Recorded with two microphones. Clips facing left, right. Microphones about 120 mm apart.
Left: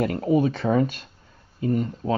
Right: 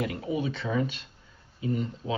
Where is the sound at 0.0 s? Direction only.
50° left (ahead or behind).